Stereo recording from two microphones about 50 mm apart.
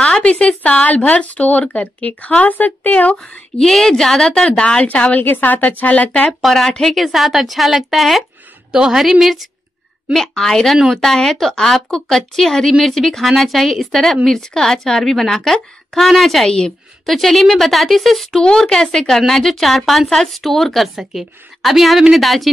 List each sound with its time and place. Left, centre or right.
0.2 s a sound: left
0.6 s speech: left
3.5 s speech: centre
4.3 s speech: centre
6.4 s speech: centre
8.7 s a woman's voice: centre
9.2 s speech: centre